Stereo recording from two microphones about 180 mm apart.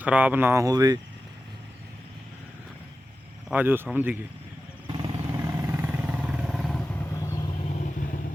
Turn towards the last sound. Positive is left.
turn(degrees=0)  # may be behind; listen again after turning